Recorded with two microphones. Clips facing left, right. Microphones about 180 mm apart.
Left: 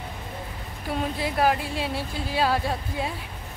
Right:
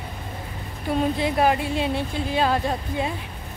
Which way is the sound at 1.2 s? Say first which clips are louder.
Right 3 dB; centre (ahead or behind).